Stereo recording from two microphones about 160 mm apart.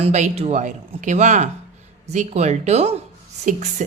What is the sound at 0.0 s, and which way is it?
Speech, 45° right (ahead or behind).